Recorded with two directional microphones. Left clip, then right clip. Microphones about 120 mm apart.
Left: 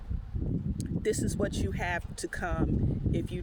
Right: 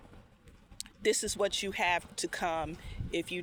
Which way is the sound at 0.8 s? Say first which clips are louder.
Right 1 dB; 40° left (ahead or behind).